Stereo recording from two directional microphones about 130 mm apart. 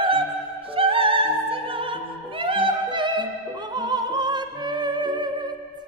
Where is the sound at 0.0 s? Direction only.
40° right (ahead or behind).